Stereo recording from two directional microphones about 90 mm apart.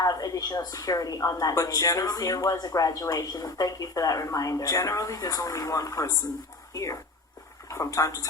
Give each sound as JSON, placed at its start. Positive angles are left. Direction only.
{"t": 0.0, "sound": "speech", "side_deg": 40}